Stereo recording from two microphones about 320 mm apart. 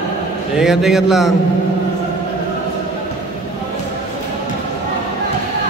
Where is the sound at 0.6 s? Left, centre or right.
Centre.